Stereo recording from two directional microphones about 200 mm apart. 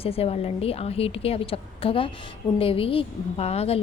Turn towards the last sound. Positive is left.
turn(degrees=30)  # may be behind; listen again after turning